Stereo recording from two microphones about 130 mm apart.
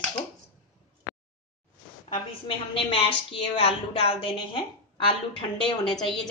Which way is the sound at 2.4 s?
45° left (ahead or behind).